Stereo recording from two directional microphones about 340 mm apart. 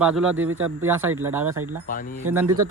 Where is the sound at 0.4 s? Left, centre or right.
Right.